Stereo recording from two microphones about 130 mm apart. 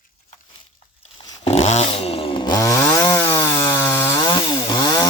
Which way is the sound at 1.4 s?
55° left (ahead or behind).